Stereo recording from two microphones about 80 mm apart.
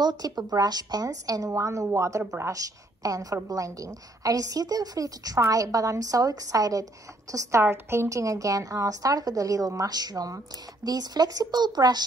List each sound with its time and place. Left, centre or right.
0.0 s a woman's voice: right
1.5 s a woman's voice: right
7.6 s a woman's voice: right